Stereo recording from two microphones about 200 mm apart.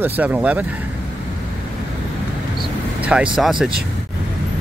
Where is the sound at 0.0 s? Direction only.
10° right (ahead or behind).